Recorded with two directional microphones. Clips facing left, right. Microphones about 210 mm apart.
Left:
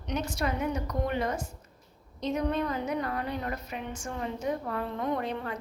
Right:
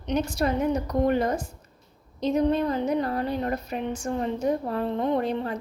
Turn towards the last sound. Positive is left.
turn(degrees=-35)  # may be behind; listen again after turning